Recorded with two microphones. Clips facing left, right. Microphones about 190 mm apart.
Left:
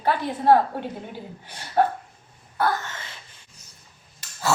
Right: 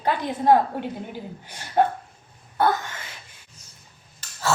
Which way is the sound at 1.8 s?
20° right (ahead or behind).